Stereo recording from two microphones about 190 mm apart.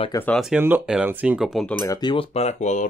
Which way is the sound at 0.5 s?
10° right (ahead or behind).